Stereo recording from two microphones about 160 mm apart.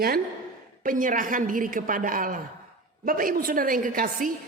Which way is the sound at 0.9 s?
55° right (ahead or behind).